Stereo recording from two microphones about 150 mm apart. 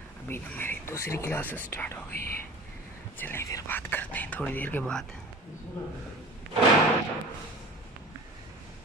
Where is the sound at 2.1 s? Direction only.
85° left.